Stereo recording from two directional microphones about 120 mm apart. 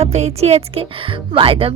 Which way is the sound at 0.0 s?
65° right (ahead or behind).